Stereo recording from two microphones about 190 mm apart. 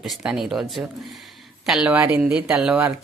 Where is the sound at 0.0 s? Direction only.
Centre (ahead or behind).